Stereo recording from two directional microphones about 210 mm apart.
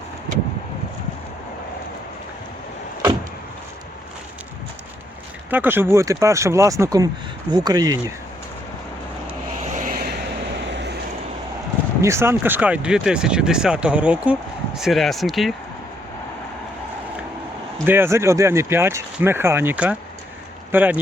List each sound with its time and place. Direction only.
5.5 s speech: 10° right (ahead or behind)
9.7 s vehicle: 40° right (ahead or behind)
10.7 s vehicle: 55° right (ahead or behind)
12.0 s speech: 10° right (ahead or behind)
17.8 s speech: 10° right (ahead or behind)